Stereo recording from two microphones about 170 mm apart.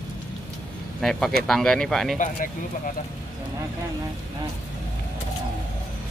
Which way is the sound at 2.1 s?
50° left (ahead or behind).